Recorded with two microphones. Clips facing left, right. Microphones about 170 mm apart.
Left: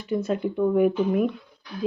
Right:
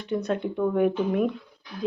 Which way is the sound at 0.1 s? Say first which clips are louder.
Left 2 dB; centre (ahead or behind).